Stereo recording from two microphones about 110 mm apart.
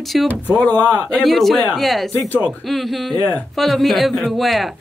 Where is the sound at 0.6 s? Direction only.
15° left (ahead or behind).